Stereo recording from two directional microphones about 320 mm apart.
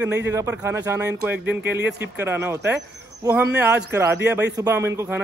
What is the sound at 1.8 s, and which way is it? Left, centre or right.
Speech, right.